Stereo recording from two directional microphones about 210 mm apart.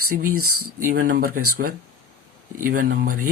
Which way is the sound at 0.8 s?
40° right (ahead or behind).